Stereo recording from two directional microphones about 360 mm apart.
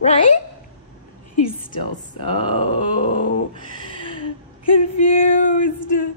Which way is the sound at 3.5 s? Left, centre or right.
Centre.